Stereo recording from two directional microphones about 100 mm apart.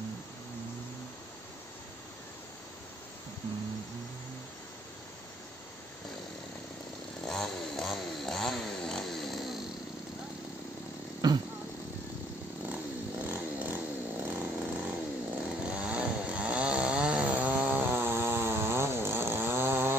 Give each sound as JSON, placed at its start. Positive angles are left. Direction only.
{"t": 7.2, "sound": "chainsaw", "side_deg": 5}
{"t": 11.1, "sound": "a sound", "side_deg": -45}
{"t": 13.2, "sound": "chainsaw", "side_deg": -15}
{"t": 17.8, "sound": "chainsaw", "side_deg": -20}